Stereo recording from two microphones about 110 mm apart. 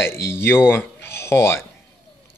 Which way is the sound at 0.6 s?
20° left (ahead or behind).